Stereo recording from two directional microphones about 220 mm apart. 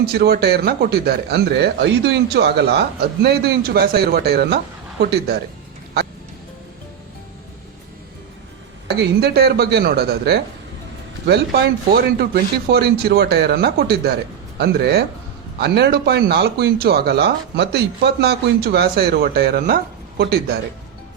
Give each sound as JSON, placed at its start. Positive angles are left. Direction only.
{"t": 0.0, "sound": "speech", "side_deg": -45}
{"t": 9.0, "sound": "speech", "side_deg": -45}
{"t": 12.2, "sound": "speech", "side_deg": -45}